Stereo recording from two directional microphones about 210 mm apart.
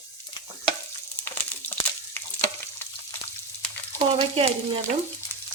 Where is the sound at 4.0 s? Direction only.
25° right (ahead or behind).